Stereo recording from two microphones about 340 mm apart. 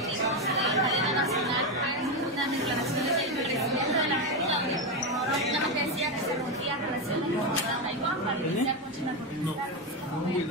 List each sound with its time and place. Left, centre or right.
0.5 s chatter: centre
3.0 s chatter: centre